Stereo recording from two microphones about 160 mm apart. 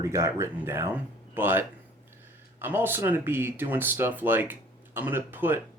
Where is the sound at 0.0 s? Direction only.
20° right (ahead or behind).